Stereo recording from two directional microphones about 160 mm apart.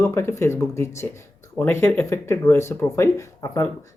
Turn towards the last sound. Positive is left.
turn(degrees=20)  # may be behind; listen again after turning